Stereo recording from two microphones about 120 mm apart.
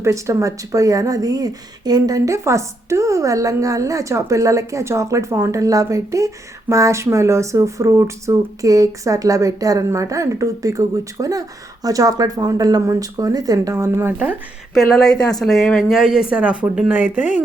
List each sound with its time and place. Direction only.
0.0 s speech: 25° right (ahead or behind)
14.7 s speech: 5° left (ahead or behind); by 17.4 s 15° right (ahead or behind)